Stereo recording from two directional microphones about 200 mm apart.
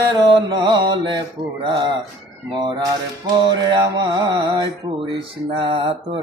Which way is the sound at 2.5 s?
20° right (ahead or behind).